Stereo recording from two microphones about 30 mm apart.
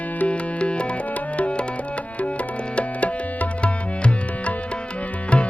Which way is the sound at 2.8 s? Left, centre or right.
Left.